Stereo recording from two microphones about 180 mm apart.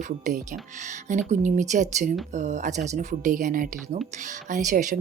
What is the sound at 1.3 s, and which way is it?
Speech, 40° right (ahead or behind).